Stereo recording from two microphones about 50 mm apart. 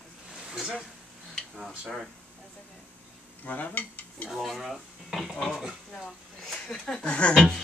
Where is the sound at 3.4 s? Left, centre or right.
Left.